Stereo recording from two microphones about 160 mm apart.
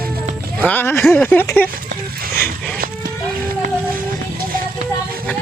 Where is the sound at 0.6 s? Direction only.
10° left (ahead or behind).